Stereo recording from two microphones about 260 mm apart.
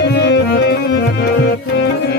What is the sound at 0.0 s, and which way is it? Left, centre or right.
Music, left.